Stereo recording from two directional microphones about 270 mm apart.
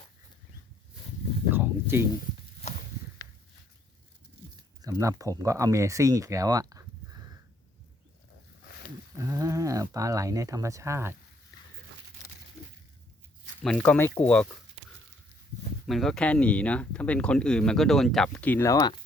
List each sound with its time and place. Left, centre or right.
1.5 s a sound: centre
2.6 s walk: left
4.8 s speech: centre
9.1 s speech: centre
13.6 s speech: centre
15.9 s speech: centre